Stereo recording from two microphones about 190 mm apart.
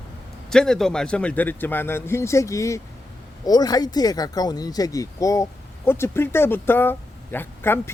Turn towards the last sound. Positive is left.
turn(degrees=10)  # may be behind; listen again after turning